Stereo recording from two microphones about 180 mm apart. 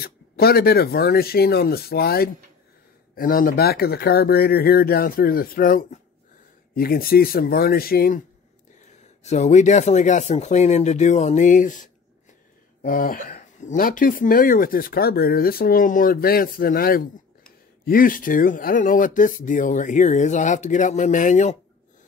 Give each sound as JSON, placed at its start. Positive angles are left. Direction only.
{"t": 0.0, "sound": "speech", "side_deg": 60}
{"t": 8.8, "sound": "speech", "side_deg": 40}